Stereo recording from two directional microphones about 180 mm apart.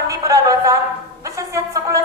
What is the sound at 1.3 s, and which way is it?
Music, 15° right (ahead or behind).